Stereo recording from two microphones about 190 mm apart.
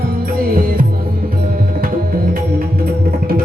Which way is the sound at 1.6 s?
50° right (ahead or behind).